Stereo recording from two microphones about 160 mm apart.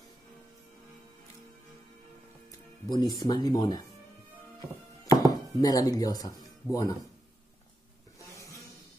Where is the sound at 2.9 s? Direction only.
25° left (ahead or behind).